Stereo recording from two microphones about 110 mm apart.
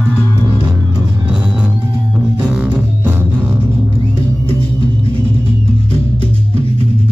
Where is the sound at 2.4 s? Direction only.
5° right (ahead or behind).